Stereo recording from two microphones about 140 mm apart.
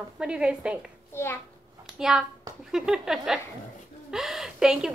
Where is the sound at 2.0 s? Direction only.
5° right (ahead or behind).